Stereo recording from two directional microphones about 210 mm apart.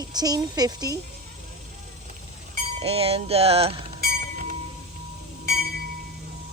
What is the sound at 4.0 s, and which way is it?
Train, 40° right (ahead or behind).